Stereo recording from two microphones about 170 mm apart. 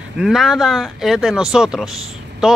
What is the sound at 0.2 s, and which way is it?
Speech, centre (ahead or behind).